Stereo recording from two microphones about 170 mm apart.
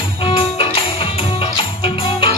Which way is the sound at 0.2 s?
30° left (ahead or behind).